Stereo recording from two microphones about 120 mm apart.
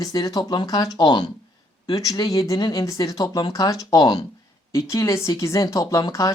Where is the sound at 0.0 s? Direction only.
30° left (ahead or behind).